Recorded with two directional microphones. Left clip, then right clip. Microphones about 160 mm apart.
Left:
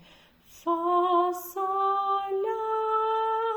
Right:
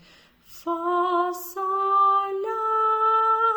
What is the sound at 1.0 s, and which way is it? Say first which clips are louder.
Music: right 1 dB; 30° right (ahead or behind).